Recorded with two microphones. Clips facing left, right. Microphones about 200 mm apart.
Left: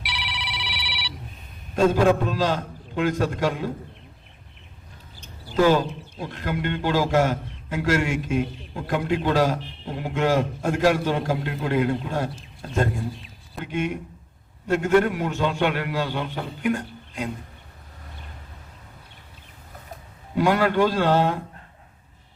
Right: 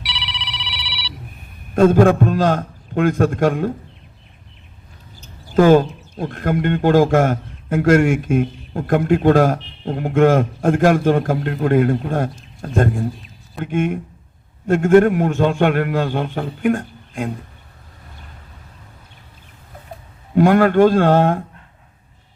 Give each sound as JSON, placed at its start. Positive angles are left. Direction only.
{"t": 0.0, "sound": "ringtone", "side_deg": 55}
{"t": 1.7, "sound": "a man's voice", "side_deg": -50}
{"t": 5.5, "sound": "a man's voice", "side_deg": -50}
{"t": 20.3, "sound": "a man's voice", "side_deg": -50}